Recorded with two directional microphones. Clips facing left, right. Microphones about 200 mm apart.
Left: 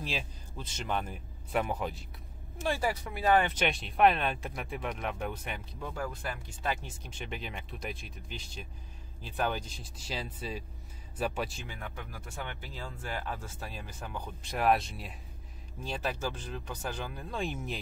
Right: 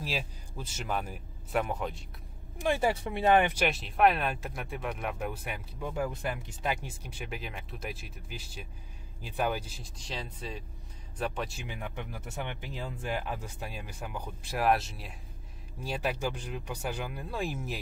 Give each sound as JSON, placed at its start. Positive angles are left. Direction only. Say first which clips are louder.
{"t": 0.0, "sound": "speech", "louder": "right 2 dB", "side_deg": -5}
{"t": 2.6, "sound": "speech", "louder": "right 3 dB", "side_deg": -20}
{"t": 3.5, "sound": "speech", "louder": "right 1 dB", "side_deg": -5}
{"t": 9.9, "sound": "speech", "louder": "left 1 dB", "side_deg": 5}
{"t": 11.5, "sound": "speech", "louder": "right 3 dB", "side_deg": -15}